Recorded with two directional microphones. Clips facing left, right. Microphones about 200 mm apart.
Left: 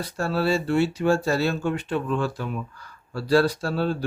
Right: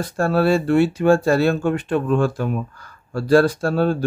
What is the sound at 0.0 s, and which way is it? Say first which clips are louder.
Speech: right 6 dB; 50° right (ahead or behind).